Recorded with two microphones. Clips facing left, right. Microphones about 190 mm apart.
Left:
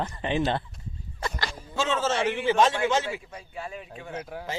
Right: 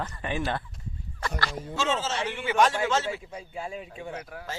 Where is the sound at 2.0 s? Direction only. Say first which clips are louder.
Left 5 dB; 55° left (ahead or behind).